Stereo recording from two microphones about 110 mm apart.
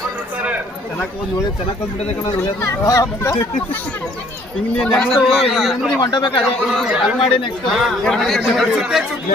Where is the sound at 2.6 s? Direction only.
30° left (ahead or behind).